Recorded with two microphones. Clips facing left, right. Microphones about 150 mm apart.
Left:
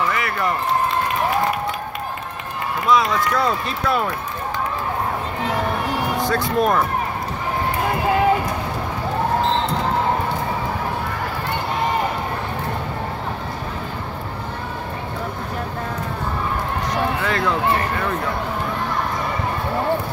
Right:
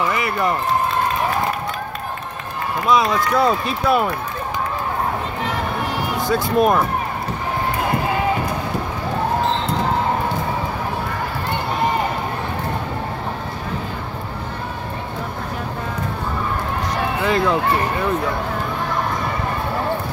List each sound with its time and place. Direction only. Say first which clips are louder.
0.1 s run: right 2 dB; 20° right (ahead or behind)
2.9 s speech: right 1 dB; 15° right (ahead or behind)
6.3 s speech: right 4 dB; 10° right (ahead or behind)
17.2 s speech: right 3 dB; 15° right (ahead or behind)